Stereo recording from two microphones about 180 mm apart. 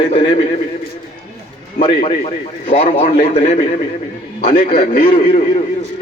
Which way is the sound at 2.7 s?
40° left (ahead or behind).